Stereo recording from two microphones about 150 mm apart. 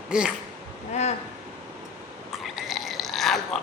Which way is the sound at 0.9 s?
50° left (ahead or behind).